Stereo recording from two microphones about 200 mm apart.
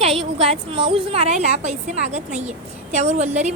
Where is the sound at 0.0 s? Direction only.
30° right (ahead or behind).